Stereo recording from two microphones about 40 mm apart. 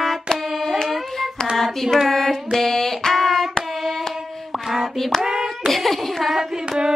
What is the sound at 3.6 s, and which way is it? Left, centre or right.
Hands, centre.